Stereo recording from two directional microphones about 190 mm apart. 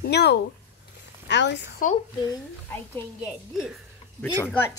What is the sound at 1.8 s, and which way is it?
Speech, 45° left (ahead or behind).